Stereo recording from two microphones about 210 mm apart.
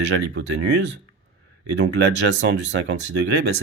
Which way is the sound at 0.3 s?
55° right (ahead or behind).